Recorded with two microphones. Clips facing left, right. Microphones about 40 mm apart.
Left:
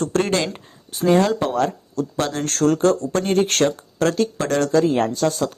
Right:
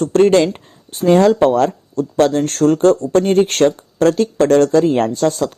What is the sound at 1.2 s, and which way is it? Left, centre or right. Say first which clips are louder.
Speech: right 8 dB; right.